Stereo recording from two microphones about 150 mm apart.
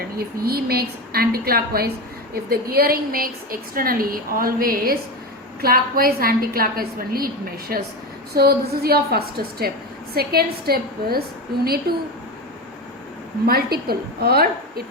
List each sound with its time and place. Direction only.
0.2 s a woman's voice: 90° right
8.4 s a woman's voice: 90° right
13.5 s a woman's voice: 90° right